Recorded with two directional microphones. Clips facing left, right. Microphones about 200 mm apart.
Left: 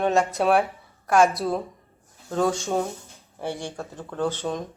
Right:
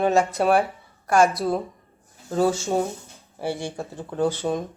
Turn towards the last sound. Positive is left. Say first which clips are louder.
# right 3 dB
turn(degrees=-10)  # may be behind; listen again after turning